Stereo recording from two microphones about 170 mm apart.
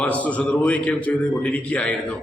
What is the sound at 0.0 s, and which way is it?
A man's voice, 10° left (ahead or behind).